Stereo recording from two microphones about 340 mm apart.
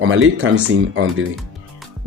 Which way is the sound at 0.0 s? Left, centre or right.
Right.